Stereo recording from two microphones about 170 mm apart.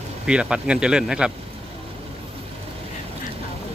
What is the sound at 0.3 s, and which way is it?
A man's voice, 5° right (ahead or behind).